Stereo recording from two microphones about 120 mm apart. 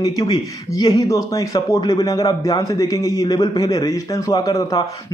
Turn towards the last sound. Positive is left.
turn(degrees=30)  # may be behind; listen again after turning